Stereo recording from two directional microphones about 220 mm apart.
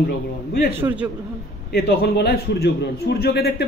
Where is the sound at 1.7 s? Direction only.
45° left (ahead or behind).